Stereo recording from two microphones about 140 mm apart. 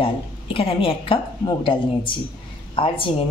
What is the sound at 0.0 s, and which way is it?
A woman's voice, 40° left (ahead or behind).